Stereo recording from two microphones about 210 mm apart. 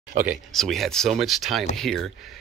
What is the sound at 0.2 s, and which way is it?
Speech, centre (ahead or behind).